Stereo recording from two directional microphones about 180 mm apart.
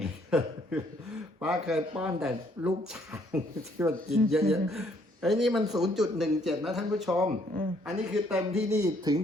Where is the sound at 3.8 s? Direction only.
15° right (ahead or behind).